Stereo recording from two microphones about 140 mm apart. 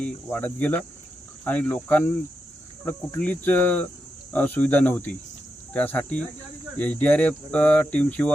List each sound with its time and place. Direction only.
0.0 s speech: 10° left (ahead or behind)